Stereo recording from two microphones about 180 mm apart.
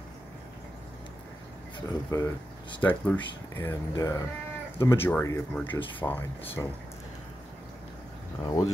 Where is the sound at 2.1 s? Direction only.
15° left (ahead or behind).